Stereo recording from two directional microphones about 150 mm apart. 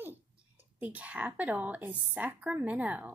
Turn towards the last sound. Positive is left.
turn(degrees=-10)  # may be behind; listen again after turning